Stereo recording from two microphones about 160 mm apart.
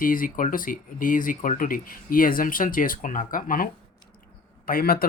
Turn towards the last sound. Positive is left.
turn(degrees=65)  # may be behind; listen again after turning